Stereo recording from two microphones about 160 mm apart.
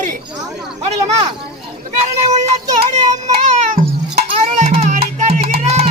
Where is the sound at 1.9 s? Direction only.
45° right (ahead or behind).